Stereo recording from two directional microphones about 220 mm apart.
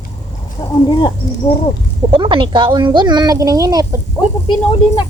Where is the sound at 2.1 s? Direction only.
20° right (ahead or behind).